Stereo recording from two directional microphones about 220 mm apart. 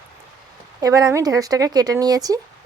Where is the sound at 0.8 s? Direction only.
15° right (ahead or behind).